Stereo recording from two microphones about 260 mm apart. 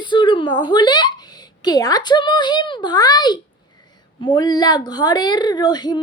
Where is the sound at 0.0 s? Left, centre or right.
Centre.